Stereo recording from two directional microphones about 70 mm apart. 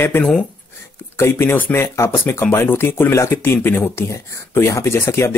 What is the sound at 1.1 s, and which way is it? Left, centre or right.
Speech, left.